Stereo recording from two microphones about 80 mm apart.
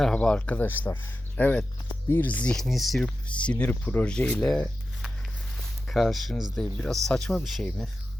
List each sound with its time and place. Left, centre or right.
0.0 s speech: centre
2.6 s speech: centre
3.2 s speech: centre
5.9 s speech: centre